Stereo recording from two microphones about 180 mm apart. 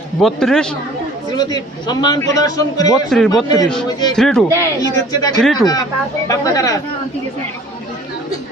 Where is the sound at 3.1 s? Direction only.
5° left (ahead or behind).